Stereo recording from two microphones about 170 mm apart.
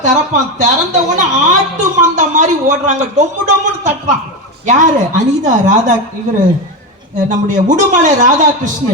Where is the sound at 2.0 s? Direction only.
45° right (ahead or behind).